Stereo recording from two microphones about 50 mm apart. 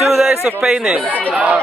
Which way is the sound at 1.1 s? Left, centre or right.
Left.